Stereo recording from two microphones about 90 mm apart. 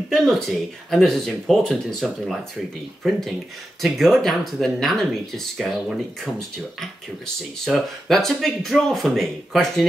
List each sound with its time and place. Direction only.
0.1 s speech: centre (ahead or behind)
7.6 s speech: 5° left (ahead or behind)